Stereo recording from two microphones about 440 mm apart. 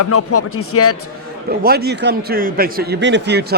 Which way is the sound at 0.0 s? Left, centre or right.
Left.